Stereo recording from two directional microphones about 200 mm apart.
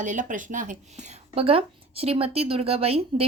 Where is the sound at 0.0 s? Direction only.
40° right (ahead or behind).